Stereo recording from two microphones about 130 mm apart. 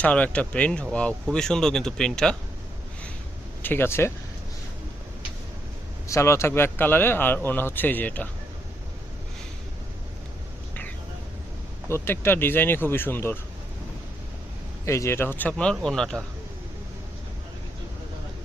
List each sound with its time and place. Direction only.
0.0 s speech: 10° left (ahead or behind)
3.6 s speech: 15° left (ahead or behind)
6.1 s speech: 20° left (ahead or behind)
11.9 s speech: 20° left (ahead or behind)
14.8 s speech: 20° left (ahead or behind); by 16.2 s 5° left (ahead or behind)